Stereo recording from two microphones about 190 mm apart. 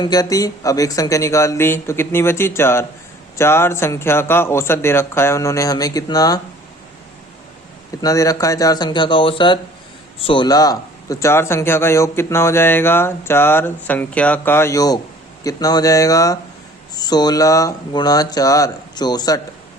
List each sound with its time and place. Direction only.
0.0 s speech: 20° left (ahead or behind)
8.0 s speech: 20° left (ahead or behind)